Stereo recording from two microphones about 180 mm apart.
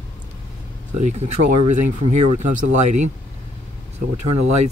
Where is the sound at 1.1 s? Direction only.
40° right (ahead or behind).